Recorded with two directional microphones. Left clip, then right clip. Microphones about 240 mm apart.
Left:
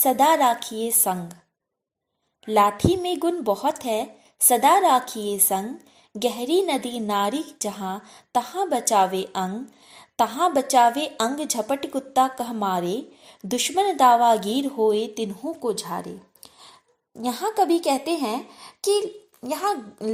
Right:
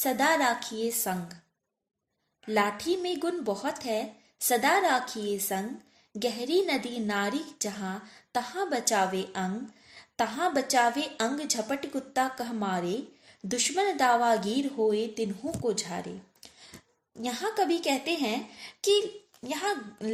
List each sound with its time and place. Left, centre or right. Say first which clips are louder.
0.0 s a woman's voice: left 7 dB; left
2.4 s a woman's voice: left 9 dB; left
17.2 s a woman's voice: left 7 dB; left